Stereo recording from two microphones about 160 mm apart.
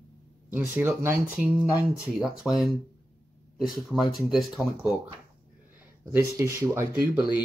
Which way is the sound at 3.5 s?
Centre (ahead or behind).